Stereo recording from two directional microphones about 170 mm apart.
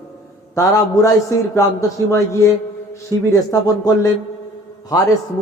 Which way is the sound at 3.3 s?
20° left (ahead or behind).